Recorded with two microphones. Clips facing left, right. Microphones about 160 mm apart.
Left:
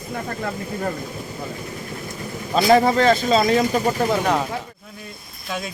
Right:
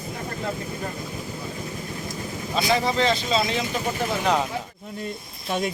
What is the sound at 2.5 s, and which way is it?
Speech, 50° left (ahead or behind).